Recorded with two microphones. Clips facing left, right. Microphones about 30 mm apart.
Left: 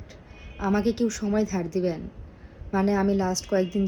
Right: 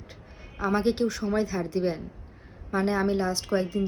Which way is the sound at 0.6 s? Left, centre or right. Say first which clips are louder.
Left 1 dB; right.